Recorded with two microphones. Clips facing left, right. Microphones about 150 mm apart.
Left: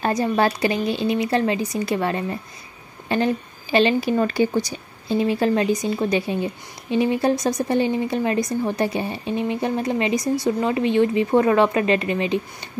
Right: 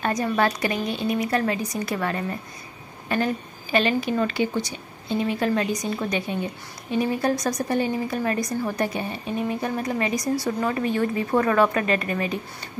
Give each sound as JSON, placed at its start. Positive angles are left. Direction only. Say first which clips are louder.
{"t": 0.0, "sound": "a woman's voice", "louder": "left 3 dB", "side_deg": 30}
{"t": 5.3, "sound": "speech", "louder": "left 4 dB", "side_deg": 30}